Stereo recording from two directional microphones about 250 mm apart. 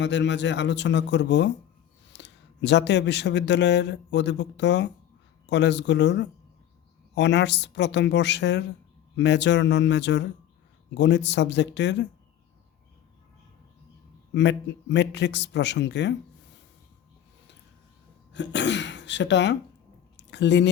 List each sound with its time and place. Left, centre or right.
0.0 s speech: left
14.3 s speech: left
18.3 s speech: left
20.1 s a sound: left